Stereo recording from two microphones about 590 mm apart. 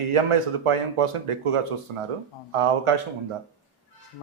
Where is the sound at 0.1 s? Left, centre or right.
Right.